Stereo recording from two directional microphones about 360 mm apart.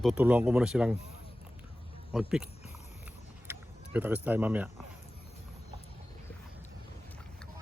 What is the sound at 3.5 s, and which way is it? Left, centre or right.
Speech, centre.